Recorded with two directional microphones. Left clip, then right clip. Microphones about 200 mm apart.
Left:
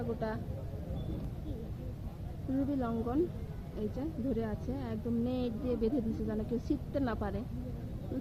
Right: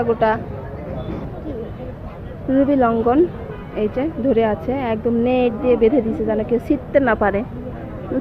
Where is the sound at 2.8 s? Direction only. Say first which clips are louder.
Right 19 dB; 25° right (ahead or behind); by 5.9 s 10° right (ahead or behind).